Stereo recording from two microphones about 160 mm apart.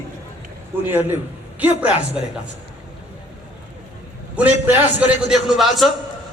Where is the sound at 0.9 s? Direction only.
15° right (ahead or behind).